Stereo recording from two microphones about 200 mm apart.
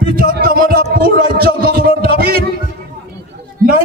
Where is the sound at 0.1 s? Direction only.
45° right (ahead or behind).